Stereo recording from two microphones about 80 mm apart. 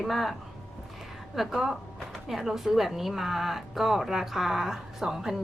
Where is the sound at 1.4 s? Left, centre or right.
Centre.